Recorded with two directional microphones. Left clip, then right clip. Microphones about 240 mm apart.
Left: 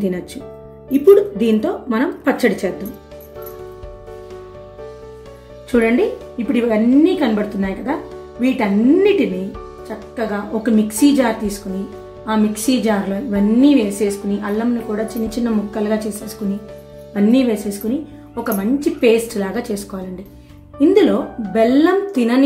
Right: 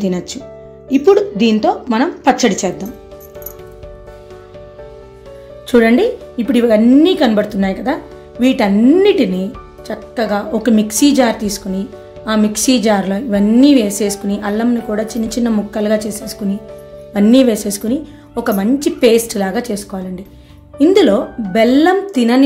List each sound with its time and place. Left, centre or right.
0.0 s a woman's voice: right
5.7 s a woman's voice: right
20.8 s a woman's voice: right